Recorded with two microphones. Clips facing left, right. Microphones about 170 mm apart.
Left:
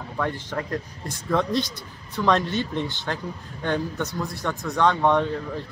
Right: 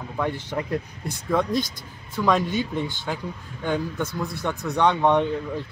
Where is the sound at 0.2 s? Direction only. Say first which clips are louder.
Right 1 dB; 10° right (ahead or behind).